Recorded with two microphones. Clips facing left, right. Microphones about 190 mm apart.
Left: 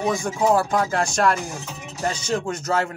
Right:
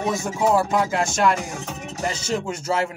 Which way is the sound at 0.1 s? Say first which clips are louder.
Even; 20° right (ahead or behind).